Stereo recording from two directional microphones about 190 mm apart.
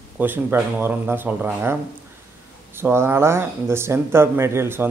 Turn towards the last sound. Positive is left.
turn(degrees=-10)  # may be behind; listen again after turning